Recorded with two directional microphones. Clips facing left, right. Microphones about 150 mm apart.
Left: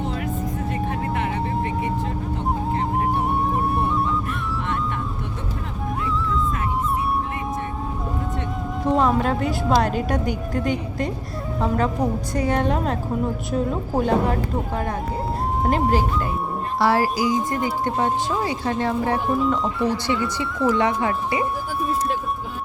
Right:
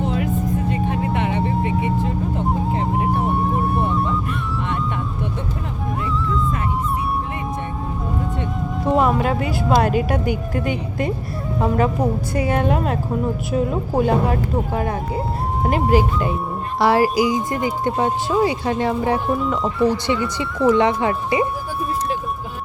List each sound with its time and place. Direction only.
0.7 s vehicle: centre (ahead or behind)
2.7 s music: centre (ahead or behind)
8.8 s speech: 10° right (ahead or behind)
19.3 s speech: centre (ahead or behind)
20.7 s speech: 25° right (ahead or behind)